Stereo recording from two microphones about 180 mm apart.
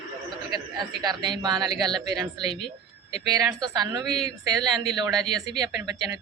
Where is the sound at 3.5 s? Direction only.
20° right (ahead or behind).